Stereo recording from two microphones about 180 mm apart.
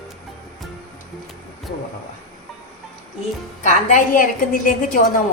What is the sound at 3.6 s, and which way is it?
A woman's voice, 45° left (ahead or behind).